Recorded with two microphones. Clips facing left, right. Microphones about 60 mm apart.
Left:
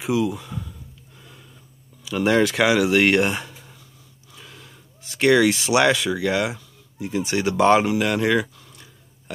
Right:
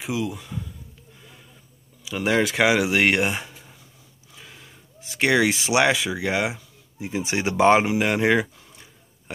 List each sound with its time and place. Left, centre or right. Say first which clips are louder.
0.0 s speech: left 5 dB; centre
1.2 s a sound: left 2 dB; centre
2.0 s speech: left 3 dB; centre